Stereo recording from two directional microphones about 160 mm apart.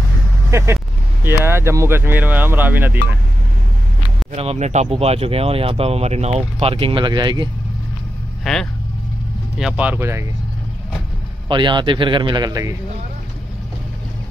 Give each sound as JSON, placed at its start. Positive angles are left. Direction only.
{"t": 0.5, "sound": "speech", "side_deg": -15}
{"t": 4.3, "sound": "speech", "side_deg": -40}
{"t": 8.5, "sound": "speech", "side_deg": 0}
{"t": 11.4, "sound": "a man's voice", "side_deg": -30}